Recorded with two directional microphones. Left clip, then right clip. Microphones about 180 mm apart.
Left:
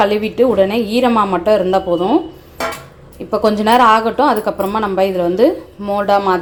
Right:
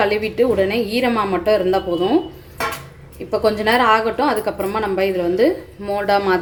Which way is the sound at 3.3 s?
15° left (ahead or behind).